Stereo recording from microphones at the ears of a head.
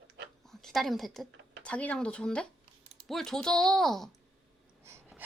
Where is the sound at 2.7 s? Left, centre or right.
Right.